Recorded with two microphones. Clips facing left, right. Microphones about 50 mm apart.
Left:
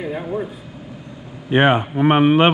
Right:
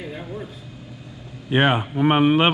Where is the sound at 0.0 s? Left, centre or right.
Centre.